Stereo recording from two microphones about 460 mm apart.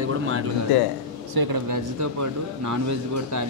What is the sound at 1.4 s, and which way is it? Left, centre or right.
Speech, right.